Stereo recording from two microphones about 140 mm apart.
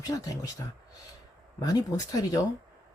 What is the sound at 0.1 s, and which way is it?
Speech, 25° left (ahead or behind).